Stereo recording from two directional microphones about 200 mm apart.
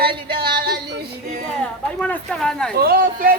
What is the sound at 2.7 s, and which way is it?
Speech, 50° right (ahead or behind).